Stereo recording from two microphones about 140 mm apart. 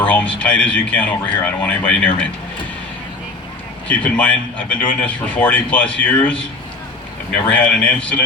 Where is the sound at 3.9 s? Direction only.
10° left (ahead or behind).